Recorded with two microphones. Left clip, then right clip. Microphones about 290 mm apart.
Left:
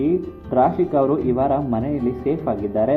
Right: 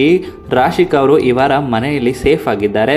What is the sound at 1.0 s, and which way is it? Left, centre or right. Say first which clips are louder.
Speech: right 9 dB; right.